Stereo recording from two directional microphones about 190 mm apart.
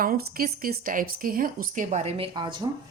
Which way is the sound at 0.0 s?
50° right (ahead or behind).